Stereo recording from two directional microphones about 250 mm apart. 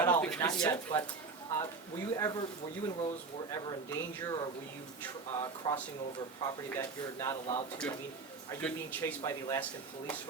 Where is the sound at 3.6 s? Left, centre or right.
Centre.